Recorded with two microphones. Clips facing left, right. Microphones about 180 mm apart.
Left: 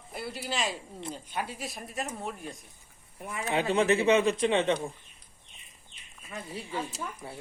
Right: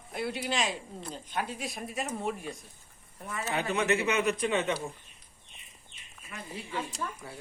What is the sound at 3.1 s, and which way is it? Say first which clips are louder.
Speech: left 1 dB; 10° left (ahead or behind).